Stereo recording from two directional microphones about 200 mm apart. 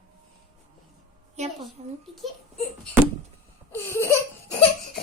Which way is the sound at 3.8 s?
10° left (ahead or behind).